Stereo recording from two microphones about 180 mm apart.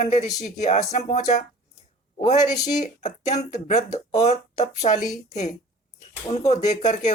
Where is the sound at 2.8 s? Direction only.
40° left (ahead or behind).